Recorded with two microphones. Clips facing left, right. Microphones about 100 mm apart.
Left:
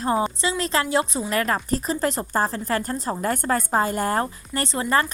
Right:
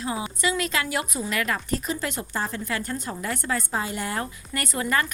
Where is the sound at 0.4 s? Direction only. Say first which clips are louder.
Left 2 dB; 30° left (ahead or behind).